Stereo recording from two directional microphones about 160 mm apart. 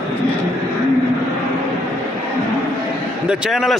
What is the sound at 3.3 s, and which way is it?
Speech, 5° right (ahead or behind).